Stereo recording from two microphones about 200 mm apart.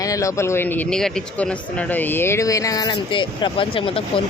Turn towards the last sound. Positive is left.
turn(degrees=25)  # may be behind; listen again after turning